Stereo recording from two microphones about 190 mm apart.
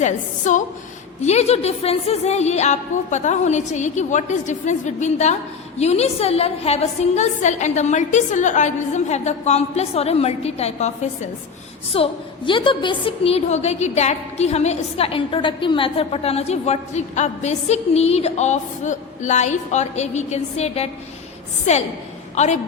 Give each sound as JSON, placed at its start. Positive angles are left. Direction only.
{"t": 0.0, "sound": "a woman's voice", "side_deg": 40}